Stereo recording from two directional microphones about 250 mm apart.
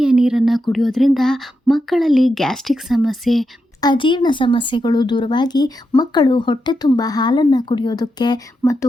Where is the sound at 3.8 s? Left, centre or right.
Centre.